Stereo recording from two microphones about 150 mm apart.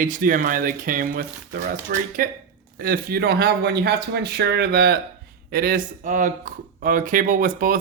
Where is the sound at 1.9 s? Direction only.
90° right.